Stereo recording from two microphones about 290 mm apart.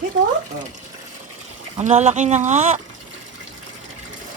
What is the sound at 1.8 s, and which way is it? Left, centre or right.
Speech, right.